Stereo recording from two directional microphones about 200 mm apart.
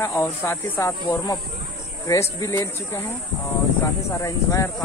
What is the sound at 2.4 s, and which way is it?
Speech, 15° left (ahead or behind).